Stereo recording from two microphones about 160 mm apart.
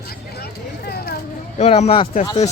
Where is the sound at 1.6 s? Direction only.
40° left (ahead or behind).